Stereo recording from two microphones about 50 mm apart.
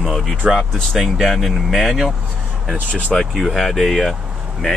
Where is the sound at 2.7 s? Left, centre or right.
Right.